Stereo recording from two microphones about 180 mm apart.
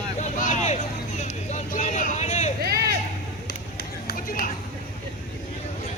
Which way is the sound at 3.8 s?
55° left (ahead or behind).